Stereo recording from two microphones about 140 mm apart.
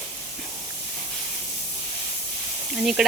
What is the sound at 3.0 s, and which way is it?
Speech, 5° right (ahead or behind).